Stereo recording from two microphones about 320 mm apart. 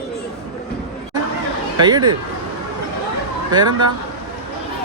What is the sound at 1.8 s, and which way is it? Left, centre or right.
Speech, centre.